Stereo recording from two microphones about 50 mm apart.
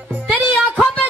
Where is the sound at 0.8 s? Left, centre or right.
Centre.